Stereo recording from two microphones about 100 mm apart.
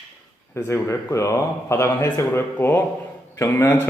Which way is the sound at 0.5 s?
30° left (ahead or behind).